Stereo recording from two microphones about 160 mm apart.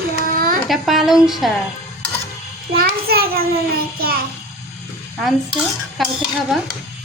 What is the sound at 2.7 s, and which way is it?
A child's voice, 70° right (ahead or behind).